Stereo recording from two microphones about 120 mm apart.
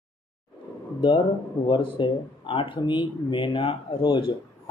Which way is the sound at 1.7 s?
45° left (ahead or behind).